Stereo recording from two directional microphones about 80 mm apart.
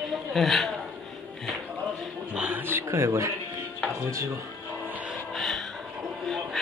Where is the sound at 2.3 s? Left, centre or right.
Centre.